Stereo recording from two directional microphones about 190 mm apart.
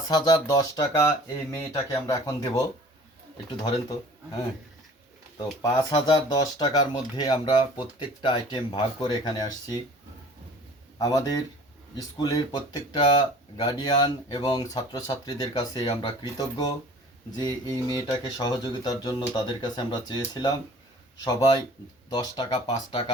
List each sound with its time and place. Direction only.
0.1 s speech: 20° left (ahead or behind)
5.4 s speech: 20° left (ahead or behind)
10.9 s speech: 20° left (ahead or behind)
17.3 s speech: 20° left (ahead or behind)